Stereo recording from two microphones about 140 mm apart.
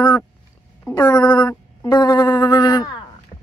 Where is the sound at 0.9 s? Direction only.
30° left (ahead or behind).